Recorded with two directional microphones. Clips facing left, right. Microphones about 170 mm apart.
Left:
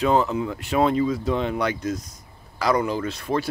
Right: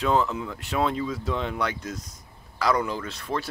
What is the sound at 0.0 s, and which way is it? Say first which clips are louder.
Speech: left 3 dB; 10° left (ahead or behind).